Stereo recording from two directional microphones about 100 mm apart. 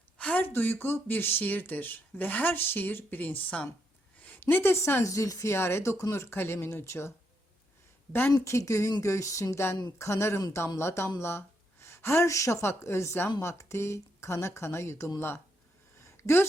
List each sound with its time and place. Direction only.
0.2 s speech: 15° left (ahead or behind)
8.4 s speech: 30° left (ahead or behind)
8.9 s a sound: 30° left (ahead or behind)
10.0 s speech: 25° left (ahead or behind)